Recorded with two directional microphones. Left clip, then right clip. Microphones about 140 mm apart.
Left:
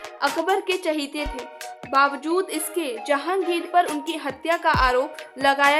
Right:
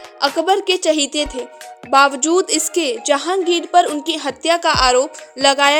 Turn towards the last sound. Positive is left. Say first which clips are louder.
# right 5 dB
turn(degrees=-30)  # may be behind; listen again after turning